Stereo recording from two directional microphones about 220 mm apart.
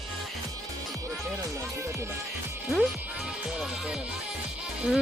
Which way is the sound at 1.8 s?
15° right (ahead or behind).